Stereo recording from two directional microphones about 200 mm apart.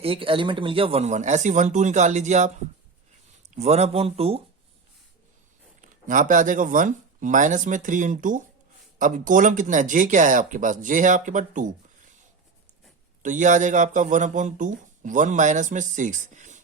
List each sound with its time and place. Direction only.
0.0 s speech: 25° right (ahead or behind)
3.5 s speech: 35° right (ahead or behind)
5.8 s speech: 40° right (ahead or behind)
13.2 s speech: 40° right (ahead or behind)